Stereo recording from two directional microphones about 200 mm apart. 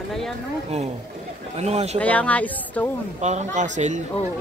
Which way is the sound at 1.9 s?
5° left (ahead or behind).